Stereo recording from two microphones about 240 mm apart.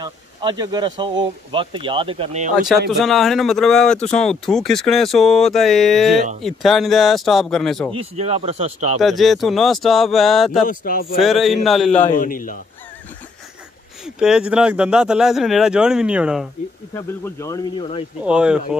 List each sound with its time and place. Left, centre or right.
0.0 s speech: centre
2.9 s speech: centre
7.9 s speech: right
9.0 s speech: centre
10.7 s speech: left
11.1 s speech: centre
12.2 s speech: left
14.0 s speech: centre
16.9 s speech: centre
18.2 s speech: centre